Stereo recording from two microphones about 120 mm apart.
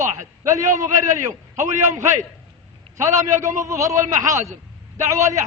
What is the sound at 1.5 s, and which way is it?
Speech, 90° right.